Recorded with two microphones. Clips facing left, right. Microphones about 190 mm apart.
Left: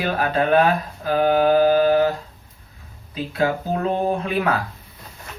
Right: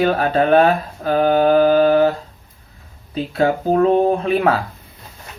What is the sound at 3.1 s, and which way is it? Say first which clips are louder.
Speech: right 4 dB; 30° right (ahead or behind).